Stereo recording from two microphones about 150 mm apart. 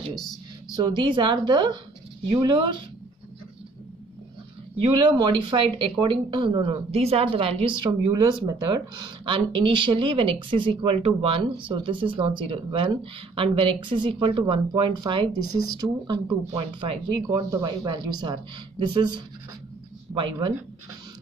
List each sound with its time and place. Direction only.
0.1 s speech: centre (ahead or behind)
0.7 s speech: 30° right (ahead or behind)
4.8 s speech: 30° right (ahead or behind)
20.1 s a sound: 10° right (ahead or behind)